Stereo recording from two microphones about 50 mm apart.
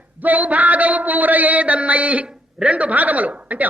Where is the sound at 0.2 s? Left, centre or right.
Right.